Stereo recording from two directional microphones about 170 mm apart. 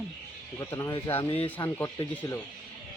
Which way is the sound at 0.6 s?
20° left (ahead or behind).